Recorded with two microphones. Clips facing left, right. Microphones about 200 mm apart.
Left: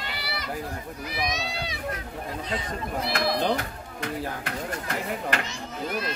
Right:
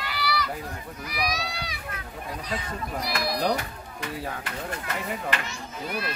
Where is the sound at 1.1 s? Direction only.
25° left (ahead or behind).